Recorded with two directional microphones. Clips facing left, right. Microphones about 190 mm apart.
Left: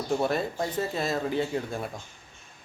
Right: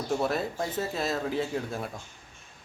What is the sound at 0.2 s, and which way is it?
Speech, centre (ahead or behind).